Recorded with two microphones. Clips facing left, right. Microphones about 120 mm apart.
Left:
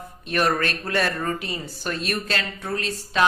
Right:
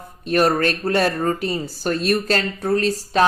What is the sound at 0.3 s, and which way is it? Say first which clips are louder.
A woman's voice: right 5 dB; 35° right (ahead or behind).